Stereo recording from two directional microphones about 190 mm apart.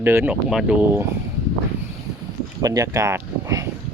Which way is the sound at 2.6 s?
15° right (ahead or behind).